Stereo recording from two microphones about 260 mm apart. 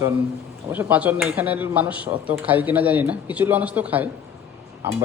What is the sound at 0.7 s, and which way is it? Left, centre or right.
Speech, centre.